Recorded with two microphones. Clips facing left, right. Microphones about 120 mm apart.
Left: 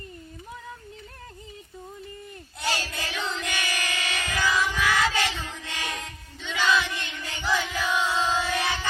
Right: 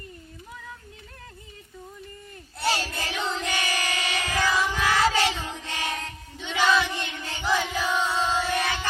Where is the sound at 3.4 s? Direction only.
35° right (ahead or behind).